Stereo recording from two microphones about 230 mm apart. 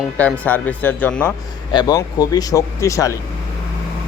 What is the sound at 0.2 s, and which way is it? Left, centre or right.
Speech, centre.